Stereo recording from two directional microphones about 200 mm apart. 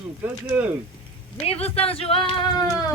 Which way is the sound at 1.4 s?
30° left (ahead or behind).